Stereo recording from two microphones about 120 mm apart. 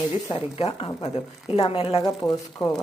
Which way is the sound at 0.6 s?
60° left (ahead or behind).